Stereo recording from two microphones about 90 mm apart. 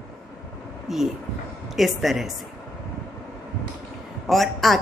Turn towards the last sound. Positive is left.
turn(degrees=0)  # may be behind; listen again after turning